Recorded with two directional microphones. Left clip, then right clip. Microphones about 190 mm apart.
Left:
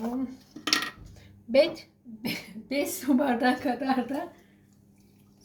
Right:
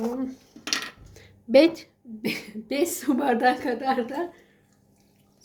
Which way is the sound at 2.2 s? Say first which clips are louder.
Right 4 dB; 65° right (ahead or behind).